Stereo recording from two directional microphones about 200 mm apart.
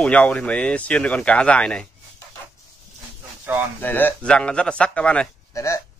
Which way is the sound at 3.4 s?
10° right (ahead or behind).